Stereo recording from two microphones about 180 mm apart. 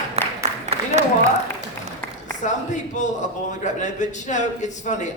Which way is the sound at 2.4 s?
40° left (ahead or behind).